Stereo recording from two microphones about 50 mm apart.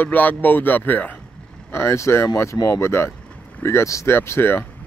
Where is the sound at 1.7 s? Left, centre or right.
Left.